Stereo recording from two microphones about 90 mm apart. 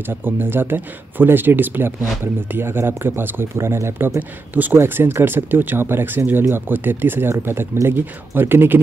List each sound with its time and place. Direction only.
0.2 s speech: 25° right (ahead or behind)